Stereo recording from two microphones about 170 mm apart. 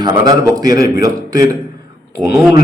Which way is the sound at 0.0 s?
25° right (ahead or behind).